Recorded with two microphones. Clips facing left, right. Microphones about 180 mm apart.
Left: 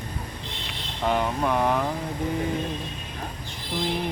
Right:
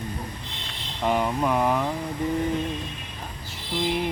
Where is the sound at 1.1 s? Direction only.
5° right (ahead or behind).